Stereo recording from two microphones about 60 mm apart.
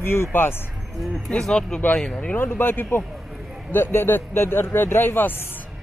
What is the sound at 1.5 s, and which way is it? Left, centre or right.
Speech, centre.